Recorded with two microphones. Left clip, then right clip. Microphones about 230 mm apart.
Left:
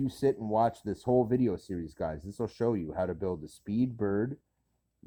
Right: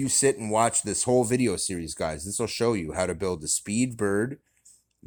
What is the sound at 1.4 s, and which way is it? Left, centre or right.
Speech, centre.